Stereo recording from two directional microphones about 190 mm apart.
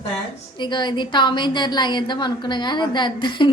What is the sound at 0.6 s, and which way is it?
A woman's voice, 25° left (ahead or behind).